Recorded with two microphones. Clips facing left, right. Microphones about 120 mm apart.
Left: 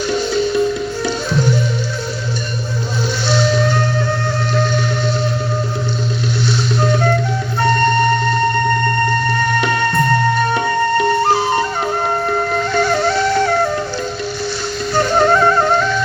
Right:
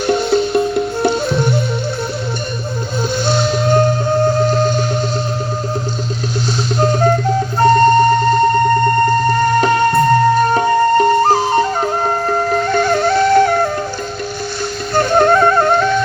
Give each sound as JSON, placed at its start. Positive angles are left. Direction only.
{"t": 0.1, "sound": "music", "side_deg": -60}
{"t": 3.2, "sound": "music", "side_deg": -50}
{"t": 6.7, "sound": "music", "side_deg": -40}
{"t": 9.0, "sound": "music", "side_deg": -40}
{"t": 14.9, "sound": "music", "side_deg": -50}